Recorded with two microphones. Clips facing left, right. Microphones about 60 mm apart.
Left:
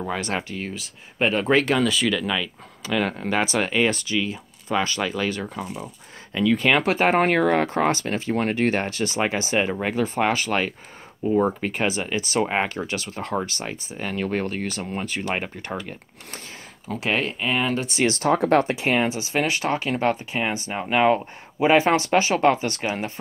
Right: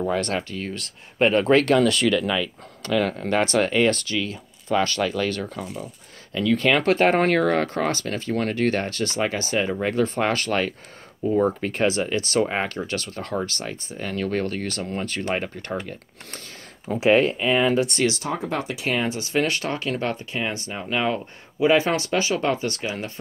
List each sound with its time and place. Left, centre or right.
0.0 s speech: centre
0.7 s speech: centre; by 9.8 s left
9.8 s speech: centre
16.9 s speech: centre
18.0 s speech: left
18.3 s speech: left
18.7 s speech: left